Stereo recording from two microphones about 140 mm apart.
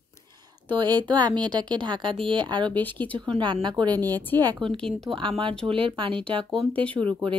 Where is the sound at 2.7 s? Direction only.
10° left (ahead or behind).